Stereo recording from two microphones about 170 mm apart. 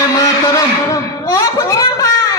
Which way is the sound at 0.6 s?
20° left (ahead or behind).